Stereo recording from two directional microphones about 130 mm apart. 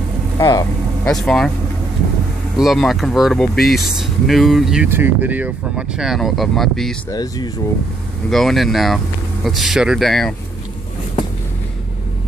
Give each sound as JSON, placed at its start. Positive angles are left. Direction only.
{"t": 0.4, "sound": "speech", "side_deg": 30}
{"t": 1.0, "sound": "speech", "side_deg": 5}
{"t": 2.5, "sound": "speech", "side_deg": 0}
{"t": 4.8, "sound": "speech", "side_deg": -15}
{"t": 7.1, "sound": "speech", "side_deg": 30}
{"t": 8.3, "sound": "speech", "side_deg": 0}